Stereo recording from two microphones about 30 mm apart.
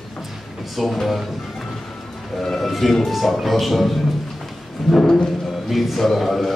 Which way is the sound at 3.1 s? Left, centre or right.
Centre.